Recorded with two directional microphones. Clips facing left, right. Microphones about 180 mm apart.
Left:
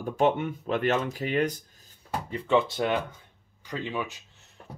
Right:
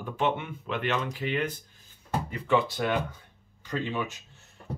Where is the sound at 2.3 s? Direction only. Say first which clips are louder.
Left 2 dB; 25° left (ahead or behind).